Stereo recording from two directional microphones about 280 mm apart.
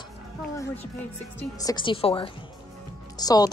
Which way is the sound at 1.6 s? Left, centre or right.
Centre.